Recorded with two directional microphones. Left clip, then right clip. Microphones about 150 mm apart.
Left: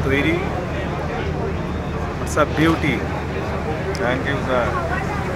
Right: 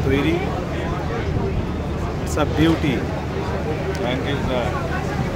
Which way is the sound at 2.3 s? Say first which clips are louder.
Left 2 dB; 30° right (ahead or behind).